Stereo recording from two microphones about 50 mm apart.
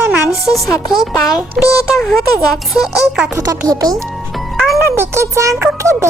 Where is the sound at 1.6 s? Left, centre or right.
Centre.